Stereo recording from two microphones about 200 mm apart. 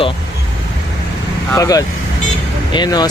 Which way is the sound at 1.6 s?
15° left (ahead or behind).